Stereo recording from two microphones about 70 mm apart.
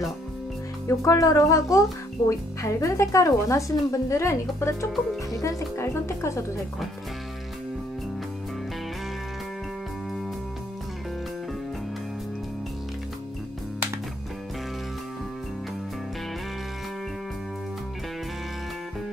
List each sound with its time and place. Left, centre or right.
0.8 s speech: left